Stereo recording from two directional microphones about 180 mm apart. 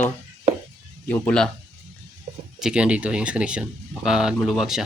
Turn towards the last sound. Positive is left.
turn(degrees=0)  # may be behind; listen again after turning